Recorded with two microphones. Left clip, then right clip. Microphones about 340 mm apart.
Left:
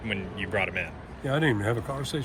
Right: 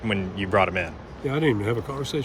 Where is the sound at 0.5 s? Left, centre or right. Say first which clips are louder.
Right 7 dB; right.